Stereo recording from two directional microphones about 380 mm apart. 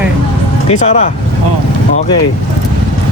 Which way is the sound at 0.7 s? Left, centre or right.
Centre.